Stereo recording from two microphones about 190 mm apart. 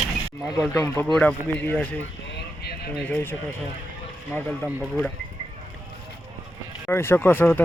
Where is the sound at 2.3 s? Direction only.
60° left (ahead or behind).